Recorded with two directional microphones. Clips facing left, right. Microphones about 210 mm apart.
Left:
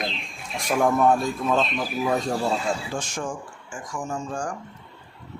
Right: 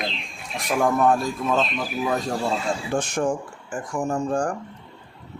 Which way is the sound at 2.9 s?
60° right (ahead or behind).